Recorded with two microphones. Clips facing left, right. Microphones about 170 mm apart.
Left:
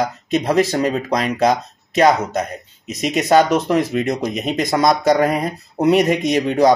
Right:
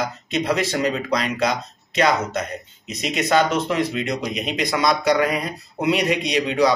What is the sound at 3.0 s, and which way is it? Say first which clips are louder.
Speech: left 5 dB; 45° left (ahead or behind).